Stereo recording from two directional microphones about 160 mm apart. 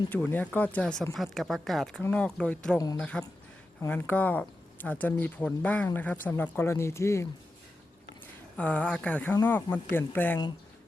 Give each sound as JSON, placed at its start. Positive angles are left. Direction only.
{"t": 0.1, "sound": "speech", "side_deg": 10}
{"t": 2.7, "sound": "speech", "side_deg": 25}
{"t": 3.0, "sound": "speech", "side_deg": 5}
{"t": 8.5, "sound": "speech", "side_deg": 10}